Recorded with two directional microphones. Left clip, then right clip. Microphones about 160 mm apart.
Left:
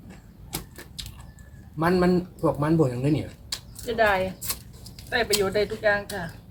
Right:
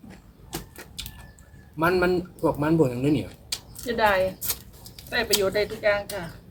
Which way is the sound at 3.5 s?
20° right (ahead or behind).